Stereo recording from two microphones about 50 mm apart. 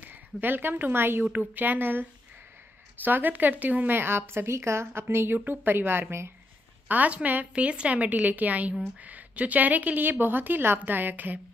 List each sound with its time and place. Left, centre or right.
0.1 s a woman's voice: right
1.3 s a woman's voice: right
3.9 s speech: right
5.4 s speech: right
6.9 s a woman's voice: right
7.5 s a woman's voice: right